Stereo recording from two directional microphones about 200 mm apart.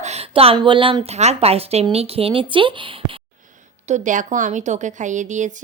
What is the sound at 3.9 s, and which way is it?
Speech, 40° right (ahead or behind).